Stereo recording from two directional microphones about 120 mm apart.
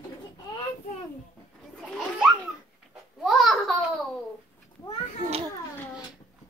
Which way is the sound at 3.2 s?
Centre (ahead or behind).